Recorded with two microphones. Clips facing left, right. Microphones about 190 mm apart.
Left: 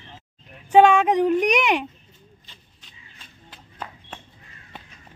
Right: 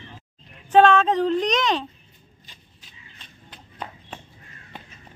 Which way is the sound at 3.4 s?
5° left (ahead or behind).